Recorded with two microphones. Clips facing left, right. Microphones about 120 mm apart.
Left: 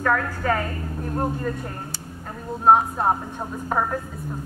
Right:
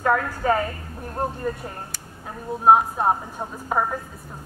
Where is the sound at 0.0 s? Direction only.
20° right (ahead or behind).